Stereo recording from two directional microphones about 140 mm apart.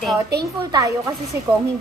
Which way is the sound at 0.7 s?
25° right (ahead or behind).